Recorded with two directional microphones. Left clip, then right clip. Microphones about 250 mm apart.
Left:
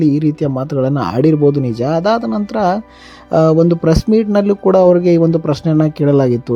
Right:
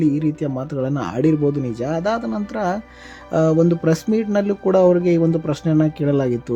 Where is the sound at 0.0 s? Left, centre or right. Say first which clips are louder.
Left 5 dB; left.